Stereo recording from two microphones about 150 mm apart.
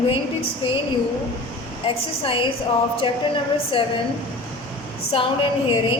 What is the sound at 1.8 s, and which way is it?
Speech, 35° left (ahead or behind).